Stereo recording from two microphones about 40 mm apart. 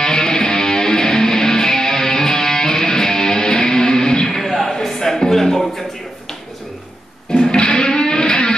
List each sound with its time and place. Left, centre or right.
0.0 s music: centre
4.4 s a sound: centre
4.8 s music: centre
7.3 s music: centre